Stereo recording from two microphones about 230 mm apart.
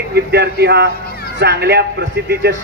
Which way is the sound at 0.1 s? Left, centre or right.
Right.